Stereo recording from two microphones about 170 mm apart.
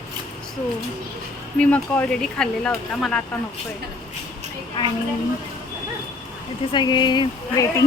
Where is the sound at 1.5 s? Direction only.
10° left (ahead or behind).